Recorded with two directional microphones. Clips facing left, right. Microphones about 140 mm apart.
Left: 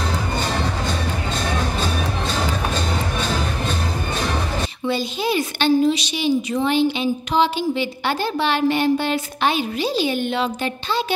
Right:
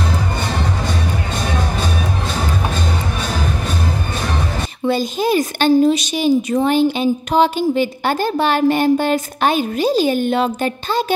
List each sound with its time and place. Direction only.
4.8 s a woman's voice: 45° right (ahead or behind)